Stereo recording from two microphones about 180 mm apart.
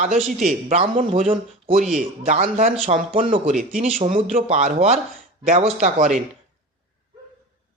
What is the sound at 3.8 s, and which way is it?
Speech, 45° right (ahead or behind).